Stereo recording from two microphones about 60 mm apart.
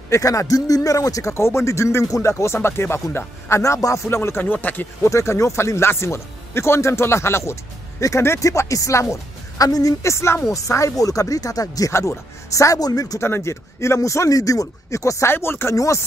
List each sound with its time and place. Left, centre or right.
0.1 s speech: left
1.3 s speech: left
2.0 s speech: left
5.0 s speech: left
8.5 s speech: left
10.0 s speech: left
10.5 s speech: left
11.9 s speech: left
13.2 s speech: left
15.3 s speech: left
15.7 s speech: left